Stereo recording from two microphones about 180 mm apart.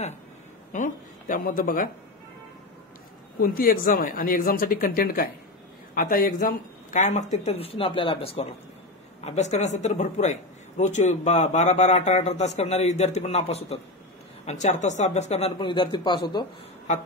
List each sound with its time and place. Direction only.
0.7 s speech: 45° left (ahead or behind)
3.3 s a man's voice: 55° left (ahead or behind); by 16.4 s 25° left (ahead or behind)